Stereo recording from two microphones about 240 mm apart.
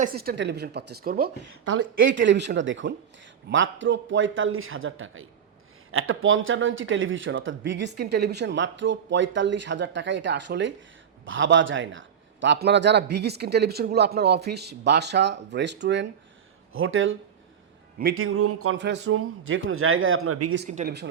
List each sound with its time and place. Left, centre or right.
0.0 s speech: right
1.8 s a man's voice: right
20.7 s speech: right